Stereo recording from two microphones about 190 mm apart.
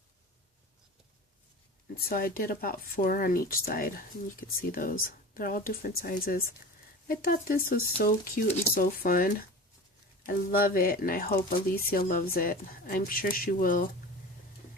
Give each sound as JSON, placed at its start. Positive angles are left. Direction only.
{"t": 2.0, "sound": "speech", "side_deg": 50}